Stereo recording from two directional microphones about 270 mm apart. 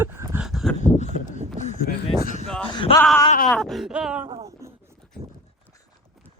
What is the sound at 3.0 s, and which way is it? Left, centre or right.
Speech, centre.